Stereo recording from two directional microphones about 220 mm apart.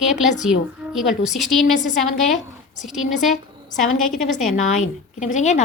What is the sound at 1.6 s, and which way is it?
Speech, 35° left (ahead or behind).